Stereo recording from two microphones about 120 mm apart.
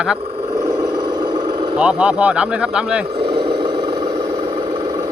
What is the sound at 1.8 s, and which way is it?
Speech, 10° right (ahead or behind).